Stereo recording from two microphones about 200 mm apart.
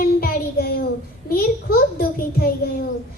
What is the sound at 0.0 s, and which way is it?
Child singing, 50° left (ahead or behind).